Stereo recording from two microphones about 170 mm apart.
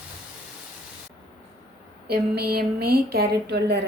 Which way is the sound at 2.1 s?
70° right (ahead or behind).